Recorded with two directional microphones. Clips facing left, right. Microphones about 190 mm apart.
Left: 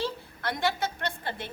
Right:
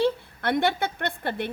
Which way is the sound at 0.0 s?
60° right (ahead or behind).